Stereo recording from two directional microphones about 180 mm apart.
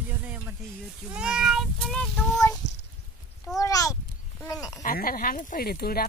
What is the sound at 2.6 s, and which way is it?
Cat, 75° left (ahead or behind).